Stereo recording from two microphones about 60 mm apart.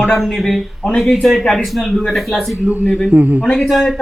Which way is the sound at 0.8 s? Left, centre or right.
Centre.